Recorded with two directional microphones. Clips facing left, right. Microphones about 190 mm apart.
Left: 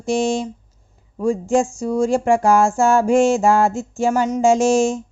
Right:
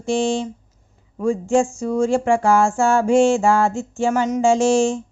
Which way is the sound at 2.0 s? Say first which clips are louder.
Left 1 dB; 40° left (ahead or behind).